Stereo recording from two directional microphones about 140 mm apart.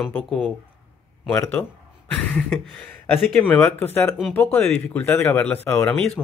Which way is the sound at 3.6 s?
15° left (ahead or behind).